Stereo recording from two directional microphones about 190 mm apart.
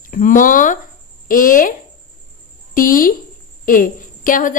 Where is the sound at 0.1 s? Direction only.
45° left (ahead or behind).